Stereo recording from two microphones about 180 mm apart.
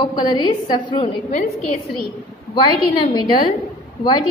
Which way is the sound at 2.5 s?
25° left (ahead or behind).